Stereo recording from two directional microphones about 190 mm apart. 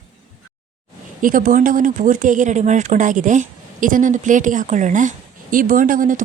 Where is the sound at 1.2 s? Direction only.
45° right (ahead or behind).